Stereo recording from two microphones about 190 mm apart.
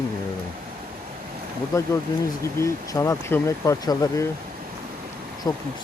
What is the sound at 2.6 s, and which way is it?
Speech, 15° left (ahead or behind).